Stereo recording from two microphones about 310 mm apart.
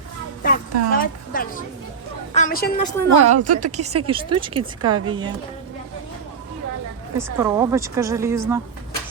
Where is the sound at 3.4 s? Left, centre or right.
Right.